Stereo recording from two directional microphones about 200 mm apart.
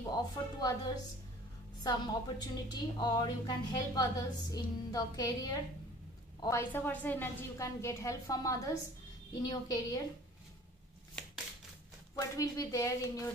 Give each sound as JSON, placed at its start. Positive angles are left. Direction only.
{"t": 0.1, "sound": "a woman's voice", "side_deg": 20}
{"t": 11.2, "sound": "a sound", "side_deg": 5}
{"t": 12.2, "sound": "a woman's voice", "side_deg": 15}